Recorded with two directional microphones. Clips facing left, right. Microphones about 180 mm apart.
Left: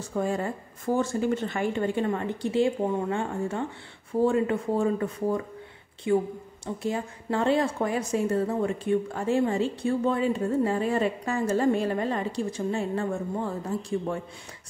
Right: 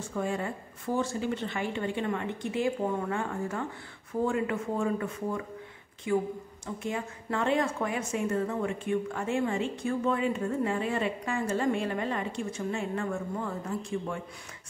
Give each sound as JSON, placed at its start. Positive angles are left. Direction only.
{"t": 0.0, "sound": "a woman's voice", "side_deg": 40}